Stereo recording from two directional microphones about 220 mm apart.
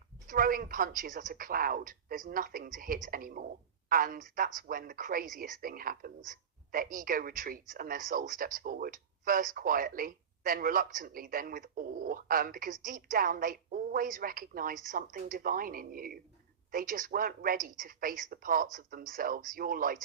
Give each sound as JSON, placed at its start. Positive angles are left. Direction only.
{"t": 0.3, "sound": "speech", "side_deg": -40}